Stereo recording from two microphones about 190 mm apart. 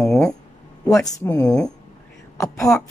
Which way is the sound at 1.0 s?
20° left (ahead or behind).